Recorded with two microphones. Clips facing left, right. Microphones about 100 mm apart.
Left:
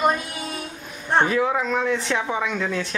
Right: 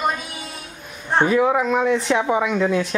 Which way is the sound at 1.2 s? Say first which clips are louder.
Right 4 dB; 10° right (ahead or behind).